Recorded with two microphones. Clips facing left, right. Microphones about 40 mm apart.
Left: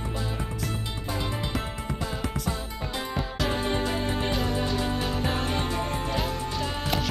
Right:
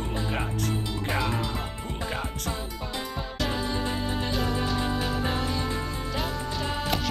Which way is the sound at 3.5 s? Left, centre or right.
Left.